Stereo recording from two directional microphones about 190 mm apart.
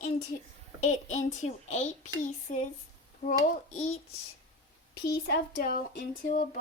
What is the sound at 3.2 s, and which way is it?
Speech, 40° left (ahead or behind).